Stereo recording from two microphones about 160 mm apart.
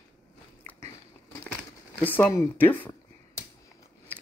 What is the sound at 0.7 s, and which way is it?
Biting, 15° left (ahead or behind).